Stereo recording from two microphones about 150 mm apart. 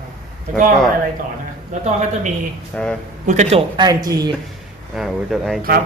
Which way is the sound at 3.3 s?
50° right (ahead or behind).